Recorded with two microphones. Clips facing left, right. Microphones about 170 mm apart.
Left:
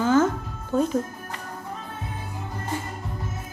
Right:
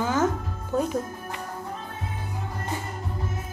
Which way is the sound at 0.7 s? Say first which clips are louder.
Left 3 dB; centre (ahead or behind).